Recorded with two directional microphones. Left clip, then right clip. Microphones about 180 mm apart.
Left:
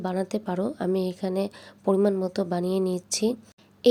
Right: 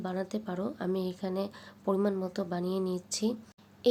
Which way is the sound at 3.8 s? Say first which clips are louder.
Left 7 dB; 40° left (ahead or behind).